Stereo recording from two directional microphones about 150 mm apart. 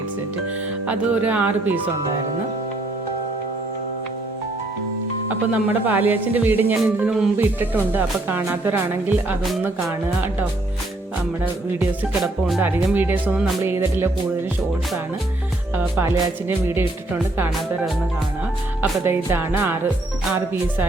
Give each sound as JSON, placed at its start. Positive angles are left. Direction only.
{"t": 0.9, "sound": "speech", "side_deg": -10}
{"t": 5.5, "sound": "speech", "side_deg": -10}
{"t": 11.8, "sound": "music", "side_deg": 0}
{"t": 12.5, "sound": "speech", "side_deg": -15}
{"t": 15.7, "sound": "speech", "side_deg": -15}
{"t": 18.8, "sound": "speech", "side_deg": -15}